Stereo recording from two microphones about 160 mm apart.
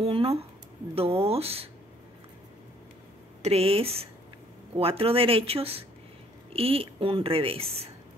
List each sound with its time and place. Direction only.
0.0 s a woman's voice: 35° right (ahead or behind)
3.4 s a woman's voice: 40° right (ahead or behind)